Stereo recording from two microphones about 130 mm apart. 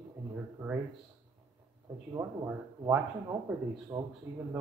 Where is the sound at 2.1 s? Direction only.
20° right (ahead or behind).